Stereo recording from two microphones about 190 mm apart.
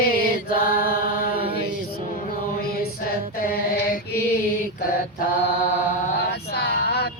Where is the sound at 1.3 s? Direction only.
30° right (ahead or behind).